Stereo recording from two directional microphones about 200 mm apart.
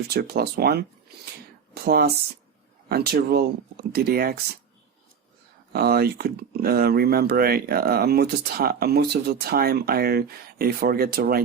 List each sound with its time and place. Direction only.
0.1 s speech: 50° right (ahead or behind)
5.7 s speech: 50° right (ahead or behind)